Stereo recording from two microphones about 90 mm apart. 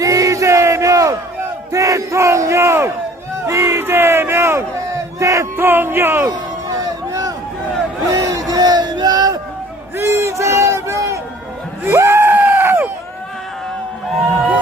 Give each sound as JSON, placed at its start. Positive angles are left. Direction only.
{"t": 0.0, "sound": "battle cry", "side_deg": -40}
{"t": 3.4, "sound": "speech", "side_deg": -30}
{"t": 6.7, "sound": "a sound", "side_deg": -40}
{"t": 8.1, "sound": "crowd", "side_deg": -40}
{"t": 10.0, "sound": "crowd", "side_deg": -30}
{"t": 11.8, "sound": "a sound", "side_deg": -30}